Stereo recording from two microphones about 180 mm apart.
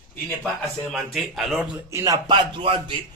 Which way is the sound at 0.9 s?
Centre (ahead or behind).